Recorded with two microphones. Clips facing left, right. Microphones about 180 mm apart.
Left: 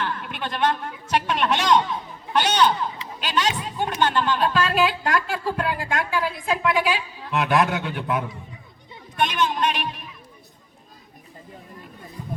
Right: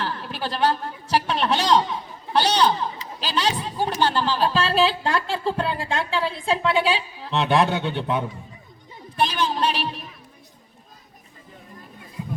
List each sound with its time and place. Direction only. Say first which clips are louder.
0.0 s a sound: even; 30° right (ahead or behind)
2.3 s speech: even; 35° right (ahead or behind)
9.1 s music: even; 30° right (ahead or behind)
12.2 s music: right 3 dB; 5° right (ahead or behind)